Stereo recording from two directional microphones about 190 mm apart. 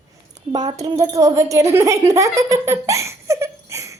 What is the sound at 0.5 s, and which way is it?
A woman's voice, 20° right (ahead or behind).